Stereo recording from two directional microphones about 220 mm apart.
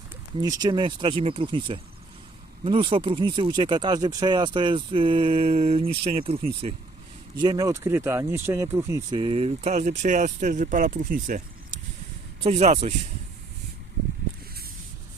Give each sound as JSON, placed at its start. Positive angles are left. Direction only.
{"t": 0.4, "sound": "speech", "side_deg": -15}